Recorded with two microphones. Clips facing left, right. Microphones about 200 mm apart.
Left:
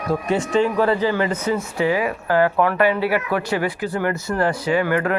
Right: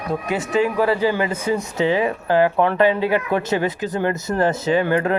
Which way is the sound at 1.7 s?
25° right (ahead or behind).